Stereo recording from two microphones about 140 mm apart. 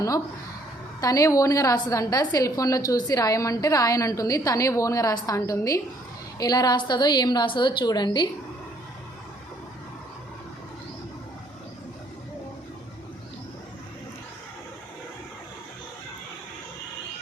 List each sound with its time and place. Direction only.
1.0 s a woman's voice: 25° left (ahead or behind)